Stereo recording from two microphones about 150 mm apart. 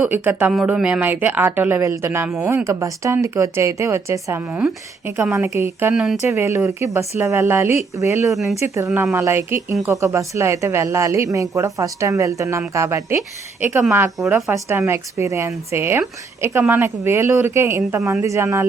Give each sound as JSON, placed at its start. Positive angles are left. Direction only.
{"t": 0.0, "sound": "a woman's voice", "side_deg": -10}
{"t": 5.9, "sound": "speech", "side_deg": -5}
{"t": 6.2, "sound": "a woman's voice", "side_deg": -20}
{"t": 8.3, "sound": "speech", "side_deg": 0}
{"t": 8.6, "sound": "speech", "side_deg": -20}
{"t": 8.9, "sound": "a woman's voice", "side_deg": -10}